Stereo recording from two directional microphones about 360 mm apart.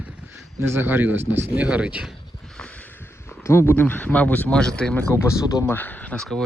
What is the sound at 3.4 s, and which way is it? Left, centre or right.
Speech, centre.